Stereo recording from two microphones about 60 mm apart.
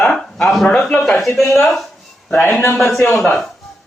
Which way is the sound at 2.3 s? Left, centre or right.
Left.